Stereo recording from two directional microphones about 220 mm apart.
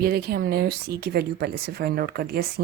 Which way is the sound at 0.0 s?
45° right (ahead or behind).